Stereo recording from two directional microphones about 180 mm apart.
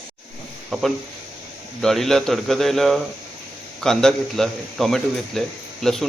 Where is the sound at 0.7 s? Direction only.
Centre (ahead or behind).